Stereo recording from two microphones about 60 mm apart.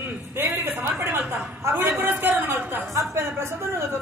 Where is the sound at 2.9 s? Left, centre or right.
Right.